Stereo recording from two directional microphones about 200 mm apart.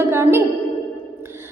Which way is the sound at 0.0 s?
10° right (ahead or behind).